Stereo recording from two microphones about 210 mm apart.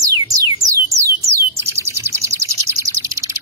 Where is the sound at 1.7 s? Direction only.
10° right (ahead or behind).